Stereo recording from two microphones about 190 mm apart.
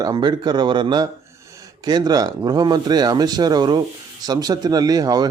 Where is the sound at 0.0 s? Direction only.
20° right (ahead or behind).